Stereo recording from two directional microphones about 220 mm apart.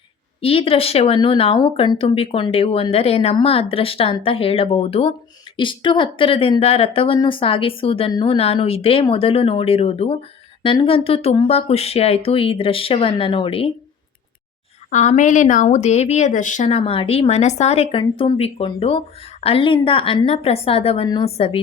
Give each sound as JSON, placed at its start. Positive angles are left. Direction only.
{"t": 0.4, "sound": "speech", "side_deg": 25}
{"t": 14.8, "sound": "speech", "side_deg": 35}